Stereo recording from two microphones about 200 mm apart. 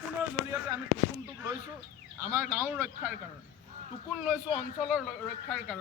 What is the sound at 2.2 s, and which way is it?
Speech, 10° right (ahead or behind).